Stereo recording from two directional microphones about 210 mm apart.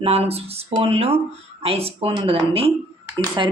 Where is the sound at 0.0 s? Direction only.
30° right (ahead or behind).